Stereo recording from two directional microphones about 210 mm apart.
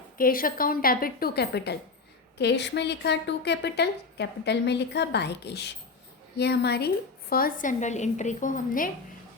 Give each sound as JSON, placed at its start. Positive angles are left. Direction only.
{"t": 0.2, "sound": "a woman's voice", "side_deg": 45}